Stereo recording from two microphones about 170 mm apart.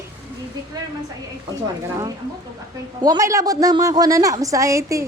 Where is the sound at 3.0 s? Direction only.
20° right (ahead or behind).